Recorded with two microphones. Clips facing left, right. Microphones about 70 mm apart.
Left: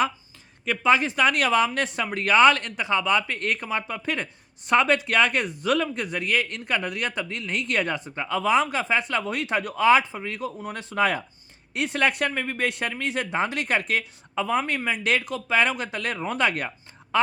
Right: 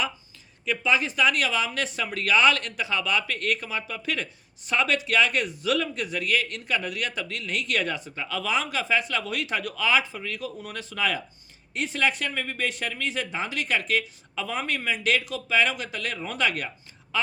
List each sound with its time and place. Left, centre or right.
0.6 s speech: left